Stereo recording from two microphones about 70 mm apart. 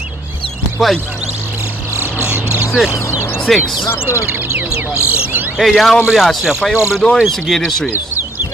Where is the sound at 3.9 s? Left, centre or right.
Left.